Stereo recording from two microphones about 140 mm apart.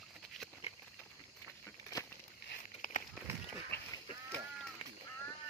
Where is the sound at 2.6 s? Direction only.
65° left (ahead or behind).